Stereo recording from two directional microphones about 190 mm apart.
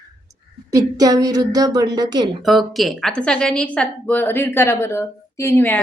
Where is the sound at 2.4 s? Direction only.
Centre (ahead or behind).